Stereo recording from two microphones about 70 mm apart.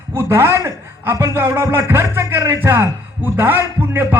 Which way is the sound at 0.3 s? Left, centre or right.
Right.